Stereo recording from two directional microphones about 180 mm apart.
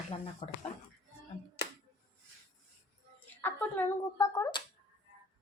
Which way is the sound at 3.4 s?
10° left (ahead or behind).